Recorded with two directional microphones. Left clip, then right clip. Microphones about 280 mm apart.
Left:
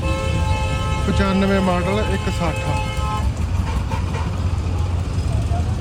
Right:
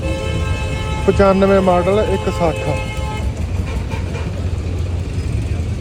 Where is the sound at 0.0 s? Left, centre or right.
Centre.